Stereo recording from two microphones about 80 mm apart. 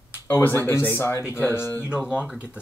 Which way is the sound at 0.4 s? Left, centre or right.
Left.